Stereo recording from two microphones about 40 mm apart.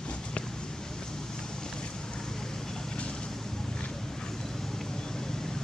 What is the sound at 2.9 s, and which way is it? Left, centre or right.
Vehicle, left.